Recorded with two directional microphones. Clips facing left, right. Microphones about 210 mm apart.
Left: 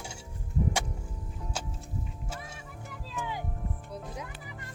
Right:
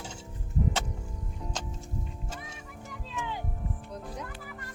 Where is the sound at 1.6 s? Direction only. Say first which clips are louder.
Left 2 dB; 10° left (ahead or behind).